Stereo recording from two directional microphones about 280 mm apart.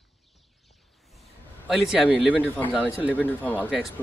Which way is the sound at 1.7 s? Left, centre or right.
Centre.